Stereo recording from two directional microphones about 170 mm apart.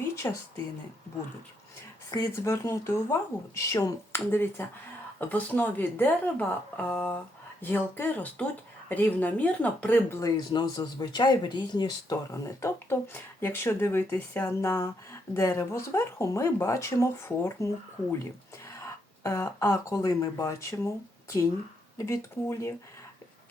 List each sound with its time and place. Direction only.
0.2 s speech: 15° left (ahead or behind)
2.0 s speech: 20° left (ahead or behind)
18.7 s speech: 20° left (ahead or behind)